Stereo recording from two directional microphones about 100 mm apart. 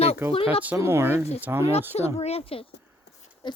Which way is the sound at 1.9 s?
90° left.